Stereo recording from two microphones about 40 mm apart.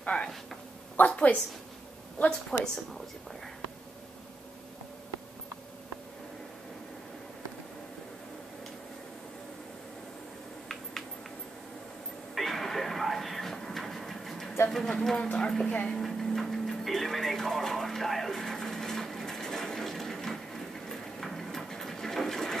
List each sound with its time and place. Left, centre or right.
0.1 s a woman's voice: centre
1.0 s a woman's voice: left
2.2 s a woman's voice: centre
12.4 s train: centre
14.7 s a sound: centre
15.2 s a woman's voice: centre
16.0 s television: centre